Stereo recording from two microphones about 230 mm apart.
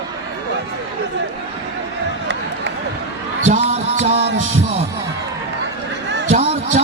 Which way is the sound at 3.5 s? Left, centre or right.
Right.